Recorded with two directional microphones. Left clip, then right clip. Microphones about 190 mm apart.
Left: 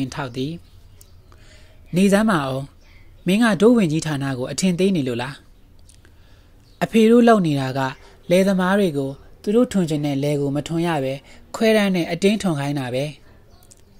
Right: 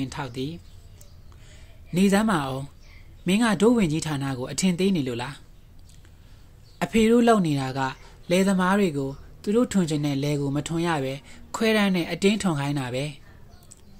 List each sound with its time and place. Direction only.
0.0 s speech: 30° left (ahead or behind)
6.8 s speech: 20° left (ahead or behind)